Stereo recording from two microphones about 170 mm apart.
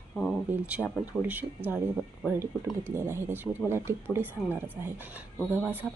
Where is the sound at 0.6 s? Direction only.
10° right (ahead or behind).